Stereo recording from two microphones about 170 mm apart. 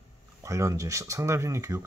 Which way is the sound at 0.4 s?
15° right (ahead or behind).